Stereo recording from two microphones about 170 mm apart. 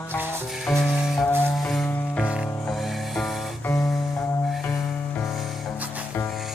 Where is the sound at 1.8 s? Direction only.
10° left (ahead or behind).